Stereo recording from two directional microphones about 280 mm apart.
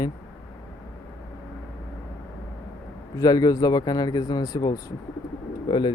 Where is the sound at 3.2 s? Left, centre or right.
Centre.